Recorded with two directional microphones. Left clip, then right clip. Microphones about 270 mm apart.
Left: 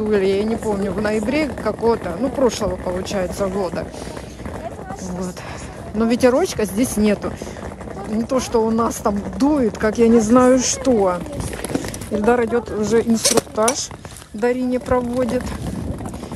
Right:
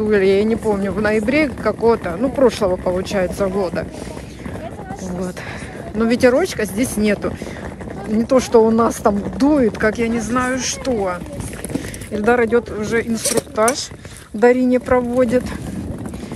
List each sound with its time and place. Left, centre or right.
0.1 s speech: centre
5.9 s speech: centre
8.3 s speech: centre; by 11.1 s left
12.2 s speech: centre